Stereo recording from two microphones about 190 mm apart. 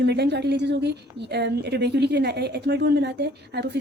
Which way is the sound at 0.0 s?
60° right (ahead or behind).